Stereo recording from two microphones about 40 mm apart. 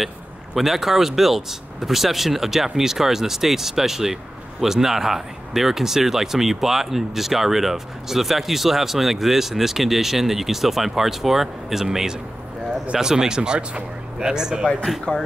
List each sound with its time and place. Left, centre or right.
0.6 s speech: centre
15.1 s speech: left